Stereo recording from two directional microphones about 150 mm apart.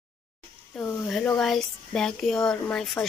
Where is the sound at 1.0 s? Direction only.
Centre (ahead or behind).